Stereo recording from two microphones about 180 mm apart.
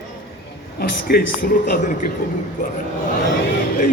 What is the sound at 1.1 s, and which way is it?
Speech, 60° left (ahead or behind).